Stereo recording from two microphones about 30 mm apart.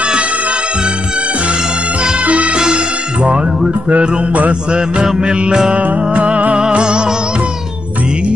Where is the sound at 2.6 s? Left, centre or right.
Right.